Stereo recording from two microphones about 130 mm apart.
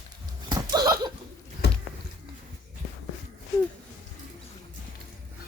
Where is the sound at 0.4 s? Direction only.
35° right (ahead or behind).